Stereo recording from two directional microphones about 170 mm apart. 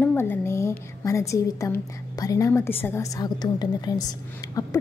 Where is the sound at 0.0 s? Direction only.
10° left (ahead or behind).